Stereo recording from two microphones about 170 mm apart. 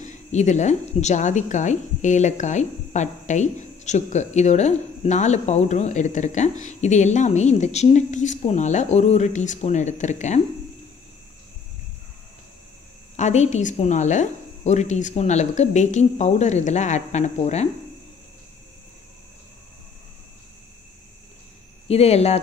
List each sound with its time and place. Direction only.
0.0 s a woman's voice: 45° left (ahead or behind)
13.1 s a woman's voice: 40° left (ahead or behind)
21.8 s speech: 35° left (ahead or behind)